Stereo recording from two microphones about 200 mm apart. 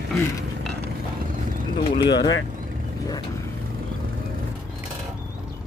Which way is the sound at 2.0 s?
20° left (ahead or behind).